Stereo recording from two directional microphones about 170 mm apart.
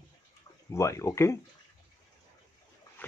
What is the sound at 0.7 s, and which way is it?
Speech, 15° left (ahead or behind).